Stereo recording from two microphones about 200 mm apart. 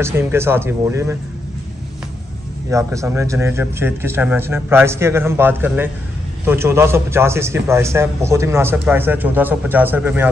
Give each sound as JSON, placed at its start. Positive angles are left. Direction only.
{"t": 0.0, "sound": "a man's voice", "side_deg": -10}
{"t": 2.7, "sound": "a man's voice", "side_deg": -15}